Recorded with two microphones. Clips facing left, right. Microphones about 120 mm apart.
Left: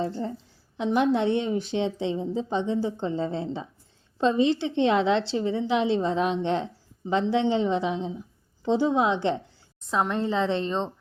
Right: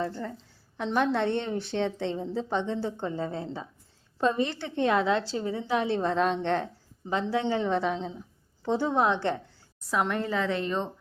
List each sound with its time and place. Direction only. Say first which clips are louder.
0.0 s a woman's voice: left 3 dB; 20° left (ahead or behind)
5.5 s a woman's voice: left 3 dB; 45° right (ahead or behind)
6.0 s a woman's voice: left 1 dB; 60° right (ahead or behind)
7.1 s a woman's voice: left 4 dB; 20° left (ahead or behind)